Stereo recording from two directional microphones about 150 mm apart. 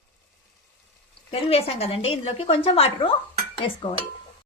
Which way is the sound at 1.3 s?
40° left (ahead or behind).